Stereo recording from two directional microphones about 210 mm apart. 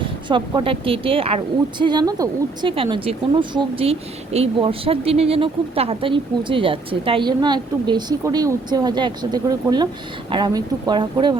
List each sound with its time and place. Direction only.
0.0 s a woman's voice: 25° right (ahead or behind)